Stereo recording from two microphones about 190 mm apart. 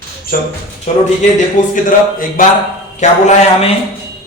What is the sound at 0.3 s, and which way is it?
Speech, 50° left (ahead or behind).